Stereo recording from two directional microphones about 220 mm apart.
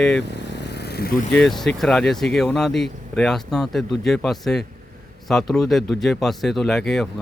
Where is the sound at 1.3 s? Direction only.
Centre (ahead or behind).